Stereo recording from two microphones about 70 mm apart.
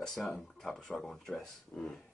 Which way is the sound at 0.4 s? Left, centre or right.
Centre.